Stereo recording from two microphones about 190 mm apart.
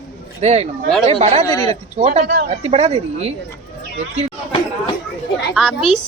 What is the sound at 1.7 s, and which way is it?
Speech, 35° right (ahead or behind).